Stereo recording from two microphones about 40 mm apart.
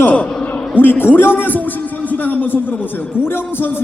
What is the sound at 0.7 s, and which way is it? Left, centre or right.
A man's voice, left.